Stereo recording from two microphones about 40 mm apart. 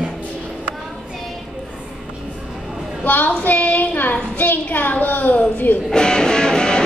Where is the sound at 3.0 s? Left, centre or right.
Left.